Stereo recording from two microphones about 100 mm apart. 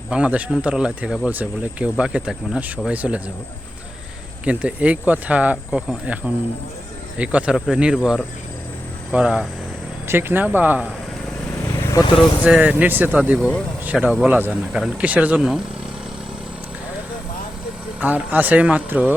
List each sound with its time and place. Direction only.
0.1 s speech: 15° right (ahead or behind)
4.4 s speech: 15° right (ahead or behind)
9.1 s speech: 10° right (ahead or behind)
10.1 s speech: 20° right (ahead or behind)
11.8 s vehicle: 35° left (ahead or behind)
12.0 s speech: 50° left (ahead or behind)
12.4 s speech: 10° right (ahead or behind)
14.7 s speech: 10° right (ahead or behind)
15.4 s speech: 5° right (ahead or behind)
18.0 s speech: 15° right (ahead or behind)